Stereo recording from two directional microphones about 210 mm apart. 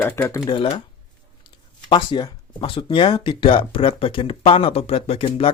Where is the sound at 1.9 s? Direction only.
20° left (ahead or behind).